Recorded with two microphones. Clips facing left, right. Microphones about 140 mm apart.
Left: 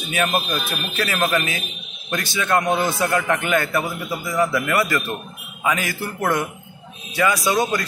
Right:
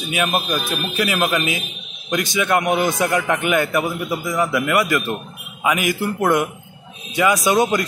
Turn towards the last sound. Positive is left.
turn(degrees=-20)  # may be behind; listen again after turning